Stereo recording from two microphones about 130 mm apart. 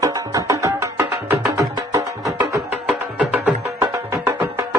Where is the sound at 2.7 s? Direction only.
10° right (ahead or behind).